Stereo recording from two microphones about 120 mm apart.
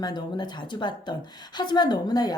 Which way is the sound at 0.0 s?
35° left (ahead or behind).